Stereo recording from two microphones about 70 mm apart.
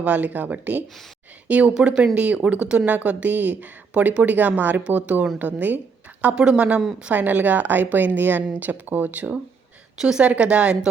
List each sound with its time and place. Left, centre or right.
0.0 s a woman's voice: right
6.2 s a woman's voice: centre
10.0 s a woman's voice: centre